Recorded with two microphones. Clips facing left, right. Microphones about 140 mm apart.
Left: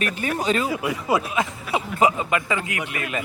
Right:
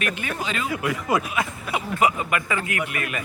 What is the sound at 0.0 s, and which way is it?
Speech, 35° left (ahead or behind).